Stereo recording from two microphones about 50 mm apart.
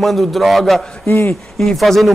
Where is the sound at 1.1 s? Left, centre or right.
Left.